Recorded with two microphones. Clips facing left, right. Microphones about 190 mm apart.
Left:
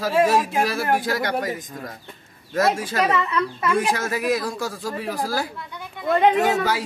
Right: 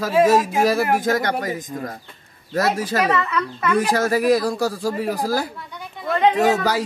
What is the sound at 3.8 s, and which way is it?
Speech, 40° right (ahead or behind).